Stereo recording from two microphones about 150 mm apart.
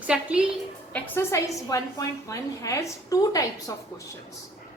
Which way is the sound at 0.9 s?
10° left (ahead or behind).